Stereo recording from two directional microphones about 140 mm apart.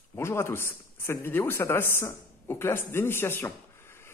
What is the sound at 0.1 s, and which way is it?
A man's voice, 20° left (ahead or behind).